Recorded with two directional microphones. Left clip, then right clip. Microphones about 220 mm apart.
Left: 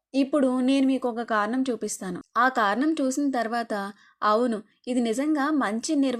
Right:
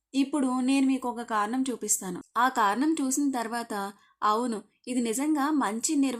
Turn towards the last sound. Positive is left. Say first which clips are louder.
# left 2 dB
turn(degrees=15)  # may be behind; listen again after turning